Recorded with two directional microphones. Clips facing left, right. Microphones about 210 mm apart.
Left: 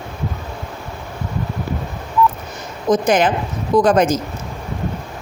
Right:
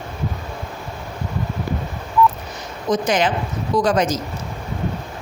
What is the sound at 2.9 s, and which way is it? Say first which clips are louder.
A woman's voice: left 4 dB; 50° left (ahead or behind).